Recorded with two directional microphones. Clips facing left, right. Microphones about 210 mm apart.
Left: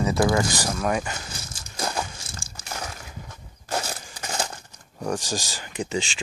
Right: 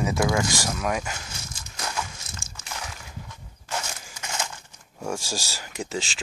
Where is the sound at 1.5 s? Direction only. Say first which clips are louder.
Left 6 dB; 30° left (ahead or behind).